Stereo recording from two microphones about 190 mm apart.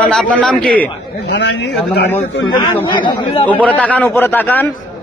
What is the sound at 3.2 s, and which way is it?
Speech, 30° left (ahead or behind).